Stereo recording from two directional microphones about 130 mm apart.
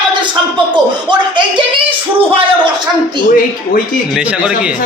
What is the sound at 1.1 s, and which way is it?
Speech, 35° right (ahead or behind).